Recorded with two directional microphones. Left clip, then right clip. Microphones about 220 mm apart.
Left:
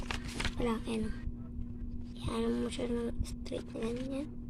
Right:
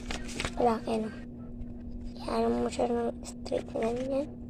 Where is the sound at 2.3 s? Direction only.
30° left (ahead or behind).